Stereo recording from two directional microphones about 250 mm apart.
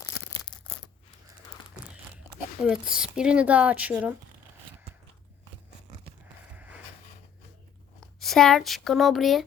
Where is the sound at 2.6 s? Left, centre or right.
Centre.